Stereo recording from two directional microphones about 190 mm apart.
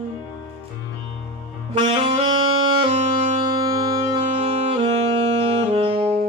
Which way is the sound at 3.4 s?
20° right (ahead or behind).